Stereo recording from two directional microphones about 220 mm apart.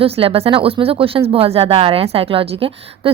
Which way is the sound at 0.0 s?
25° right (ahead or behind).